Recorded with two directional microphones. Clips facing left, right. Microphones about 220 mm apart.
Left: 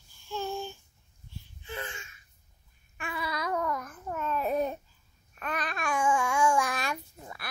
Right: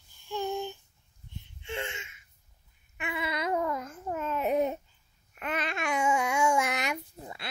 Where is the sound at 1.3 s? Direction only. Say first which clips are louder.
Right 3 dB; 25° right (ahead or behind).